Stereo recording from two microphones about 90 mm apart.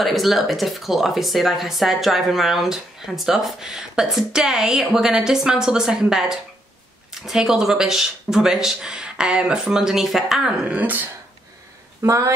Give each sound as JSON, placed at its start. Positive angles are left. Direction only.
{"t": 0.0, "sound": "speech", "side_deg": 0}
{"t": 10.8, "sound": "speech", "side_deg": -20}
{"t": 12.0, "sound": "speech", "side_deg": -30}